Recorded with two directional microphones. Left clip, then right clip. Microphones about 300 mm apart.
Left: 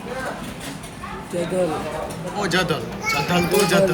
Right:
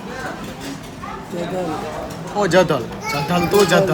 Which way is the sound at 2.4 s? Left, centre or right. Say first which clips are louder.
Right 7 dB; right.